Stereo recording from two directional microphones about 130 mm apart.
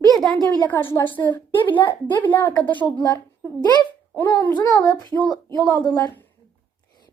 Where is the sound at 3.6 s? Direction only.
30° left (ahead or behind).